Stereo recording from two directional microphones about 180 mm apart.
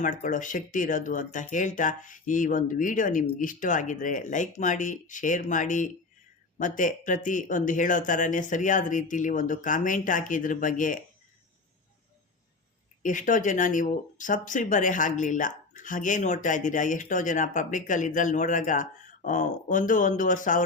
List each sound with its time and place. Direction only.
0.0 s speech: 45° left (ahead or behind)
13.0 s speech: 45° left (ahead or behind)